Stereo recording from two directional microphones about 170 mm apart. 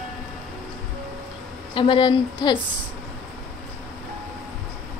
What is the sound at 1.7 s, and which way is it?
Speech, 30° left (ahead or behind).